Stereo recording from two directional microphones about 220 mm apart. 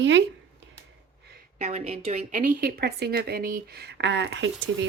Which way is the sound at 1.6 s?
30° right (ahead or behind).